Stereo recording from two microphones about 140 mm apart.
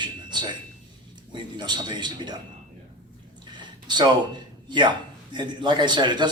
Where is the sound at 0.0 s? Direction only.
35° right (ahead or behind).